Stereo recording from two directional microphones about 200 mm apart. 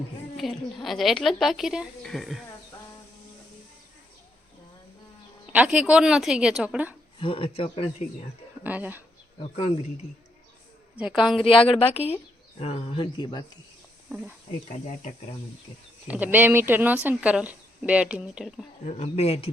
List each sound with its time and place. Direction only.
0.3 s speech: centre (ahead or behind)
5.5 s speech: 5° right (ahead or behind)
7.2 s speech: 25° left (ahead or behind)
8.6 s speech: 10° right (ahead or behind)
10.9 s speech: 5° right (ahead or behind)
11.4 s speech: 25° left (ahead or behind)
16.0 s speech: 10° right (ahead or behind)
18.9 s speech: 35° left (ahead or behind)